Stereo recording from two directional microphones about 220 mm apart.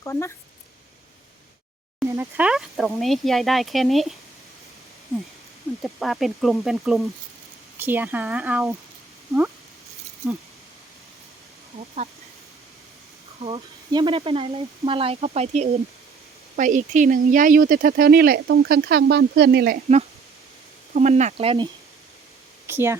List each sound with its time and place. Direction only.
0.0 s speech: 10° left (ahead or behind)
2.0 s speech: 10° right (ahead or behind)
5.8 s speech: centre (ahead or behind)
10.2 s speech: 5° right (ahead or behind)
13.4 s speech: 20° right (ahead or behind); by 19.8 s 45° right (ahead or behind)
20.9 s speech: 30° right (ahead or behind)
22.6 s speech: 10° right (ahead or behind)